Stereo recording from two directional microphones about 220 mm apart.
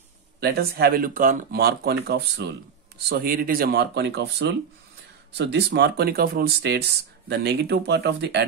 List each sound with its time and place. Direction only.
0.4 s speech: 45° right (ahead or behind)